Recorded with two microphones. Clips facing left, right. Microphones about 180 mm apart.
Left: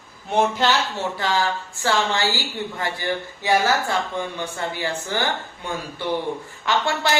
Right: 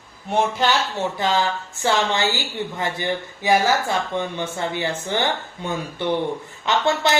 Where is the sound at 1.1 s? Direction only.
20° right (ahead or behind).